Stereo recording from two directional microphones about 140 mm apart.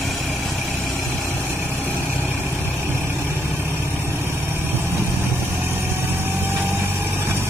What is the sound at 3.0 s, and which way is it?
Vehicle, 15° right (ahead or behind).